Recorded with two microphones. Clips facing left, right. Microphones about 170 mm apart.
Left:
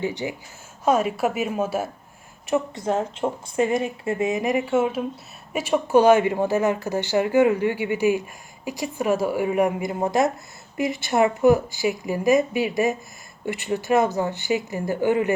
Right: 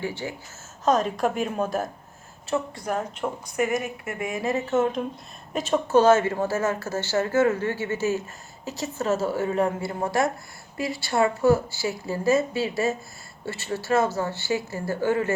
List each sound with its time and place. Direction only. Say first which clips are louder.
0.0 s speech: left 4 dB; 15° left (ahead or behind)
2.5 s speech: left 4 dB; 20° left (ahead or behind)